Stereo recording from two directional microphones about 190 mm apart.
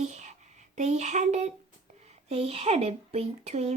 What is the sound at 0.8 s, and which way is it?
Speech, 35° right (ahead or behind).